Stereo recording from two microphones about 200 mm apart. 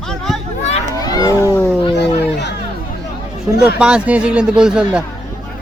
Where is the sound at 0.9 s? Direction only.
20° left (ahead or behind).